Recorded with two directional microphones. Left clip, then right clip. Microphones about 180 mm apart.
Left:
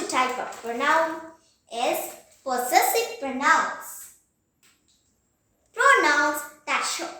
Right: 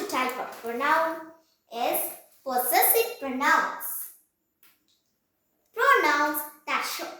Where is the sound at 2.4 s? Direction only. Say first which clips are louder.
Left 3 dB; 15° left (ahead or behind).